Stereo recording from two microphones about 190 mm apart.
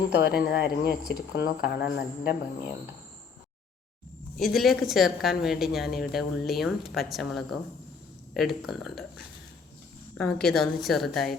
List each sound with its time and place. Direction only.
0.1 s speech: 55° left (ahead or behind)
4.4 s speech: centre (ahead or behind)